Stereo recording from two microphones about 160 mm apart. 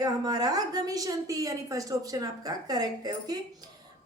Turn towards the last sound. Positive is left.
turn(degrees=-25)  # may be behind; listen again after turning